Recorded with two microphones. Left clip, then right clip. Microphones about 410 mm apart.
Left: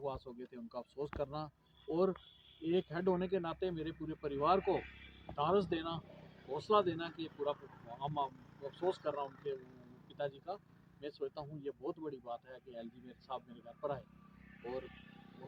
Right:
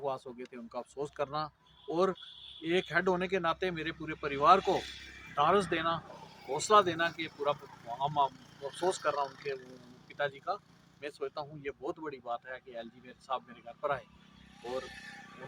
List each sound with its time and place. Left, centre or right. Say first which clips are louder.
0.0 s speech: right 6 dB; left
4.6 s speech: right 5 dB; left
5.7 s speech: right 8 dB; left
7.1 s speech: right 6 dB; left
8.0 s speech: right 9 dB; left
8.6 s speech: right 6 dB; centre
10.1 s speech: right 7 dB; left
14.6 s vehicle: right 6 dB; left